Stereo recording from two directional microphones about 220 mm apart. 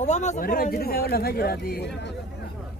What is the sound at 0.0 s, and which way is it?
Speech, 30° left (ahead or behind).